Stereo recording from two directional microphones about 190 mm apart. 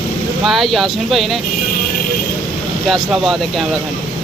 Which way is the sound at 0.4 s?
Centre (ahead or behind).